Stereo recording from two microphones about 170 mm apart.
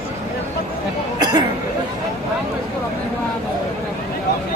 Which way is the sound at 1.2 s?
25° right (ahead or behind).